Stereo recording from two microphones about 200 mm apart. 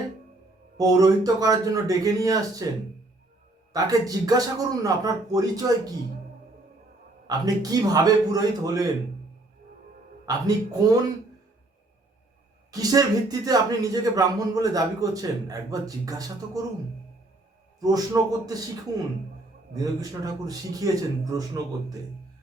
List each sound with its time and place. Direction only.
0.8 s speech: 20° right (ahead or behind)
3.7 s speech: 15° right (ahead or behind)
7.3 s a man's voice: 20° right (ahead or behind)
10.2 s a man's voice: 20° right (ahead or behind)
12.7 s speech: 20° right (ahead or behind)
17.7 s a man's voice: 20° right (ahead or behind)
19.7 s speech: 20° right (ahead or behind)